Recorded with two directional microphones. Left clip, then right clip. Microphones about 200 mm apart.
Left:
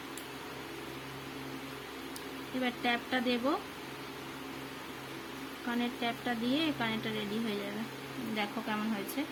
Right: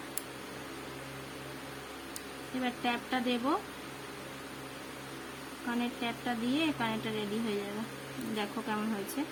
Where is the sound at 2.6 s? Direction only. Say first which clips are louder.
Left 1 dB; 5° right (ahead or behind).